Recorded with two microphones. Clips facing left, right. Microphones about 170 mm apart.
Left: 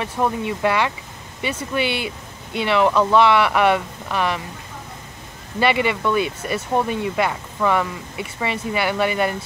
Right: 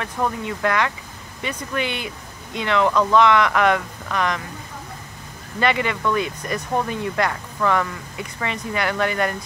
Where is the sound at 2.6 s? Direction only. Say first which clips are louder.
Left 2 dB; 15° left (ahead or behind).